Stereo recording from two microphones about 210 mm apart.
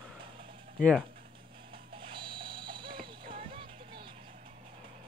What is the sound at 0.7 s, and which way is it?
Speech, 5° left (ahead or behind).